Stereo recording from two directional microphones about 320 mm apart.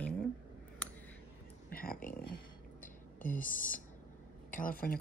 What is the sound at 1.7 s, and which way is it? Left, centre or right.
Speech, left.